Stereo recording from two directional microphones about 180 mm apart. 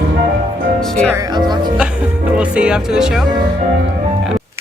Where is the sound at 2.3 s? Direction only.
5° right (ahead or behind).